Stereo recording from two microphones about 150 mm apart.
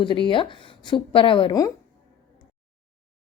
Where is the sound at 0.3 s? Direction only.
35° left (ahead or behind).